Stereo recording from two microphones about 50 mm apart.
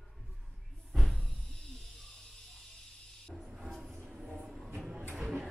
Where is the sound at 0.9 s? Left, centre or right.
Centre.